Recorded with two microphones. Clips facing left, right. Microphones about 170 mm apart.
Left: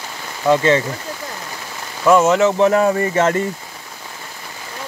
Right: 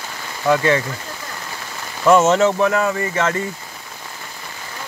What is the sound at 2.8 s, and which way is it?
Speech, 35° left (ahead or behind).